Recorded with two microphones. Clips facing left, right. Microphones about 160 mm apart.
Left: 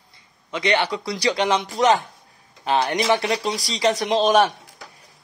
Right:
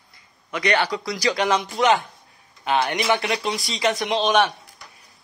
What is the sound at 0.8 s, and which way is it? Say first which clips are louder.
Speech: left 1 dB; 30° left (ahead or behind).